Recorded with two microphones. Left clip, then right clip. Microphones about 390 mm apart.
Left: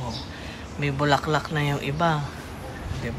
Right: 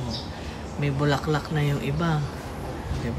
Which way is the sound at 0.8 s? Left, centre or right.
Centre.